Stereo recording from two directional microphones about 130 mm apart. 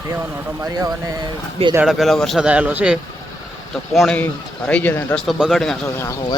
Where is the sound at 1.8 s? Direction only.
Centre (ahead or behind).